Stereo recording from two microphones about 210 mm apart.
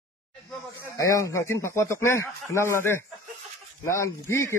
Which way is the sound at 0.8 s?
15° left (ahead or behind).